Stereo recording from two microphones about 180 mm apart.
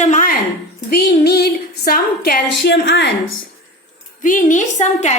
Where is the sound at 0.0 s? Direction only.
45° left (ahead or behind).